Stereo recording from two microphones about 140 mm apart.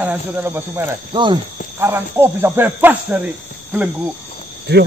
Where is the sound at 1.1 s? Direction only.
35° right (ahead or behind).